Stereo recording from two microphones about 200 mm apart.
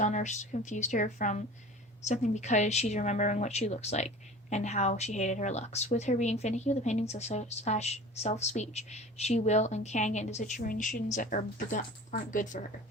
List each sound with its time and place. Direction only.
0.0 s a woman's voice: 35° left (ahead or behind)